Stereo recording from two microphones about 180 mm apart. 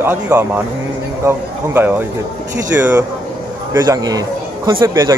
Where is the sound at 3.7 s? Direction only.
20° right (ahead or behind).